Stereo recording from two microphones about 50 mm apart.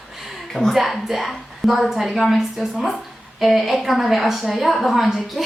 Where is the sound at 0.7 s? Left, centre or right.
Centre.